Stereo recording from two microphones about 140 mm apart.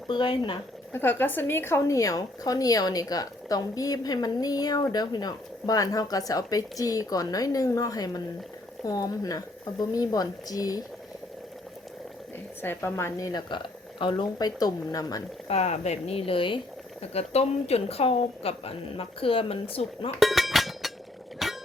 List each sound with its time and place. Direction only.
0.1 s speech: 35° left (ahead or behind)
0.9 s a woman's voice: 15° left (ahead or behind)
12.6 s a woman's voice: 15° left (ahead or behind)
15.4 s a woman's voice: 50° left (ahead or behind)
20.1 s a sound: centre (ahead or behind)